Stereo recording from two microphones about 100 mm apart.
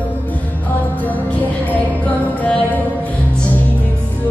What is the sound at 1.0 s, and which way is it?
Music, 15° left (ahead or behind).